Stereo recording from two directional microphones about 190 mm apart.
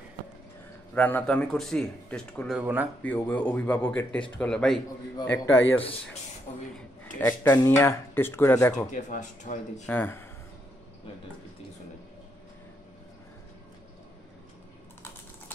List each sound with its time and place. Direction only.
0.9 s speech: 10° left (ahead or behind); by 2.9 s 10° right (ahead or behind)
3.0 s speech: 10° left (ahead or behind)
5.1 s speech: 15° left (ahead or behind)
7.2 s speech: 15° left (ahead or behind)
8.9 s speech: 40° left (ahead or behind)
9.8 s speech: 10° left (ahead or behind)